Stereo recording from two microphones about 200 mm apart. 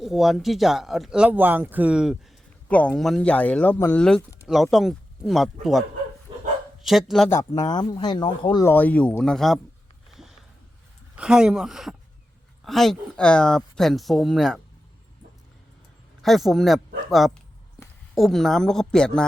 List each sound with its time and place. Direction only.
0.0 s speech: centre (ahead or behind)
2.6 s speech: 5° left (ahead or behind)
6.8 s speech: centre (ahead or behind)
7.3 s speech: 20° left (ahead or behind)
8.7 s speech: 10° left (ahead or behind)
10.1 s sniff: centre (ahead or behind)
11.2 s speech: 5° right (ahead or behind)
16.2 s speech: centre (ahead or behind)